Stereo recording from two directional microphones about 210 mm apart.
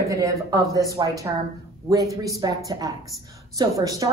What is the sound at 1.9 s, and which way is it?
A woman's voice, 15° right (ahead or behind).